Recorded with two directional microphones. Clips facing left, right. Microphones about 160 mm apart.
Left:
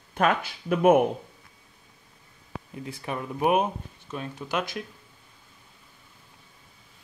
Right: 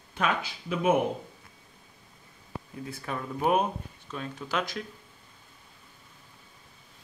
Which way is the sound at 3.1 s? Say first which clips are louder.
Left 2 dB; 10° left (ahead or behind).